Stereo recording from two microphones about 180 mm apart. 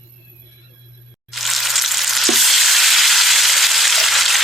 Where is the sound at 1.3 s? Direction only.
Centre (ahead or behind).